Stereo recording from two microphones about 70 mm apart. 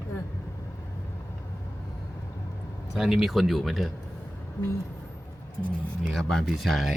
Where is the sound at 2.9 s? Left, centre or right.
Centre.